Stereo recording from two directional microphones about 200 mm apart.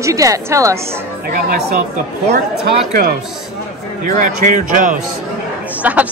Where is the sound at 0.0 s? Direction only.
15° right (ahead or behind).